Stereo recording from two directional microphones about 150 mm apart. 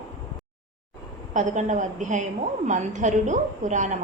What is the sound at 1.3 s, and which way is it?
A woman's voice, 55° right (ahead or behind).